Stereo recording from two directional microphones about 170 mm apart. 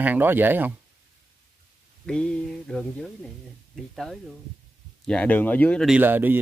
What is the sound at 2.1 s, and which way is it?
Speech, 5° left (ahead or behind).